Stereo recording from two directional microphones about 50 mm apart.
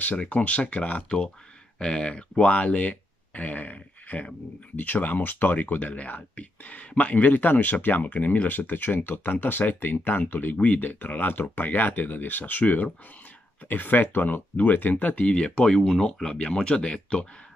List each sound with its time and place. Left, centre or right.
0.3 s speech: left
15.3 s speech: centre